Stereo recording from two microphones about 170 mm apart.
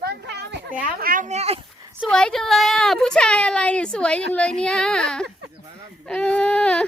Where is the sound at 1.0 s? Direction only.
55° right (ahead or behind).